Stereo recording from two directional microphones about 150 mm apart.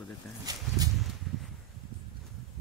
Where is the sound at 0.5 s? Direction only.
25° right (ahead or behind).